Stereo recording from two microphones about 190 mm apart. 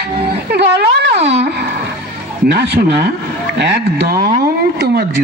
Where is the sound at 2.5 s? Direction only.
60° right (ahead or behind).